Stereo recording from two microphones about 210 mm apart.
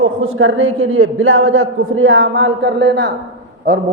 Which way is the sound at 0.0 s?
70° right (ahead or behind).